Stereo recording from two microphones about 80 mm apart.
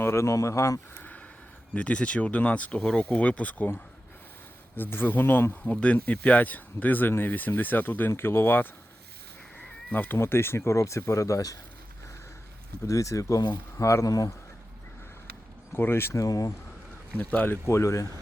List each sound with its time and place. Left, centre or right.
0.0 s speech: left
1.7 s speech: centre
4.8 s speech: left
5.7 s speech: centre
9.9 s speech: left
12.8 s speech: left
15.7 s speech: left
16.2 s speech: left
17.2 s speech: left